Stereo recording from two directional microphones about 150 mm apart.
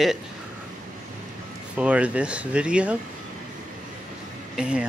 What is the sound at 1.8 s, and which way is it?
Speech, 10° right (ahead or behind).